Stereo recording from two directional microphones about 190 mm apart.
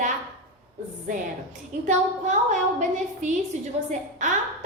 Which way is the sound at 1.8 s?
40° right (ahead or behind).